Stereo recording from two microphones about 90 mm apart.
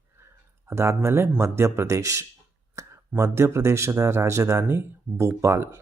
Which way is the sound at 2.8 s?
35° right (ahead or behind).